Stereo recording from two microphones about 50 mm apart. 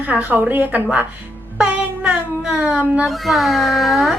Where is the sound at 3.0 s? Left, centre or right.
Centre.